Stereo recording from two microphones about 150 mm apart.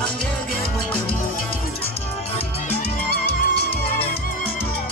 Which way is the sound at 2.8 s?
90° left.